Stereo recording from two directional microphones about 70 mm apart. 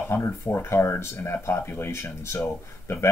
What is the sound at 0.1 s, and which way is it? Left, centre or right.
Speech, left.